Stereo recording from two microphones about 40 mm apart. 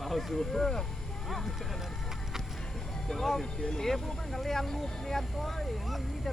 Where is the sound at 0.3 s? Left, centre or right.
Centre.